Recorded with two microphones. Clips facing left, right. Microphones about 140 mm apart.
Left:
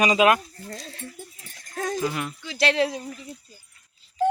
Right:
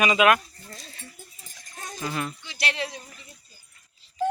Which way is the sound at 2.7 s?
90° left.